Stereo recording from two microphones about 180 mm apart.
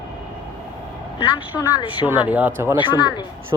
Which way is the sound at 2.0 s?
10° right (ahead or behind).